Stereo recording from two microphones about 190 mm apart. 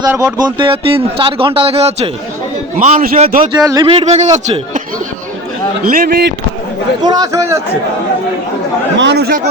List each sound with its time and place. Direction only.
0.4 s a man's voice: 25° right (ahead or behind); by 3.5 s 45° right (ahead or behind)
3.5 s a man's voice: 20° right (ahead or behind); by 4.8 s 40° right (ahead or behind)
5.9 s speech: 55° right (ahead or behind)
7.0 s a man's voice: 20° right (ahead or behind)
9.0 s speech: 65° right (ahead or behind)